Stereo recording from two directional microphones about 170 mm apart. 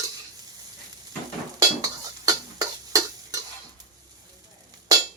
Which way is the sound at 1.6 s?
20° right (ahead or behind).